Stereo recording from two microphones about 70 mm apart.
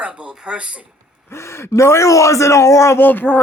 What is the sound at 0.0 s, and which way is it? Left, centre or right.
Speech, centre.